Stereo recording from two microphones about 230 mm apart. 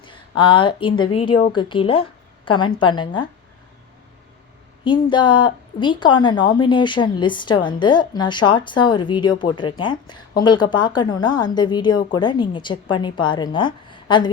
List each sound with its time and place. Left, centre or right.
0.0 s a woman's voice: left
4.8 s speech: left